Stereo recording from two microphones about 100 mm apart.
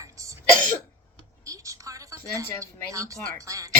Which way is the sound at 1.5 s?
30° right (ahead or behind).